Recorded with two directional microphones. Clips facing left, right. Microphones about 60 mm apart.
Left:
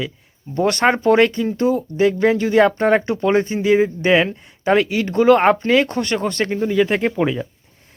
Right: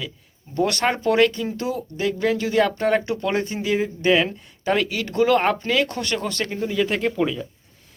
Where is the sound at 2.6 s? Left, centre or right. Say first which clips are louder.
Left 5 dB; left.